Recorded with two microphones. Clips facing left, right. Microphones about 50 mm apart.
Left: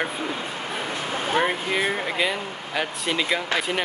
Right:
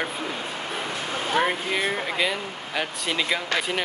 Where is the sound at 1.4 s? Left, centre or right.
Centre.